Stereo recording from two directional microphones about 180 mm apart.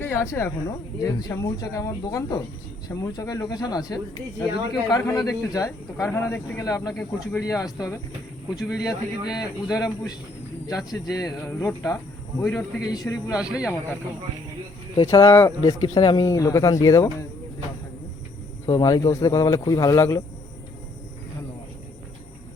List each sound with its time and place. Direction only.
0.0 s speech: 15° left (ahead or behind)
6.9 s speech: 5° left (ahead or behind)
7.4 s speech: 20° left (ahead or behind)
10.8 s speech: 20° left (ahead or behind)
13.3 s speech: 5° right (ahead or behind)
15.1 s speech: 15° left (ahead or behind)
18.6 s speech: 20° left (ahead or behind)